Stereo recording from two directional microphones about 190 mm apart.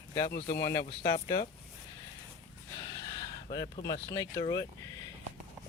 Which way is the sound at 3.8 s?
20° left (ahead or behind).